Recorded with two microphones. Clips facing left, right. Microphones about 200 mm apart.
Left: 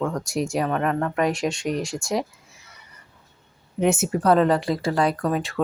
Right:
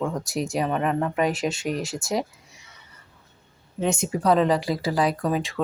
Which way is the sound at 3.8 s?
5° left (ahead or behind).